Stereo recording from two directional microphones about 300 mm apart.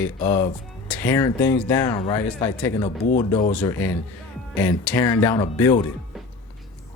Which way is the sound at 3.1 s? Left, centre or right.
Left.